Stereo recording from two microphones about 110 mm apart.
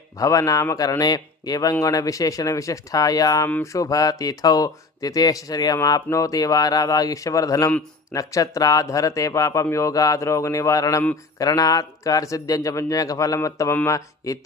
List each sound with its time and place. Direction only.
0.2 s a man's voice: 30° left (ahead or behind)